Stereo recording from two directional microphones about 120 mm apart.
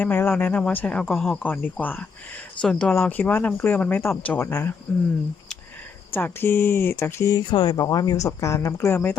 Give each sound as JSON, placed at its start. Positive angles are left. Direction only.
{"t": 0.0, "sound": "speech", "side_deg": 15}
{"t": 1.4, "sound": "speech", "side_deg": 15}
{"t": 6.1, "sound": "speech", "side_deg": 15}
{"t": 7.3, "sound": "speech", "side_deg": 40}
{"t": 7.8, "sound": "speech", "side_deg": 30}